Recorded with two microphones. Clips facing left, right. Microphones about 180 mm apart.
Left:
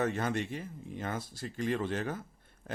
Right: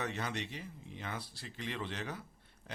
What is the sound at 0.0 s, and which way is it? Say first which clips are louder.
Speech: left 7 dB; 50° left (ahead or behind).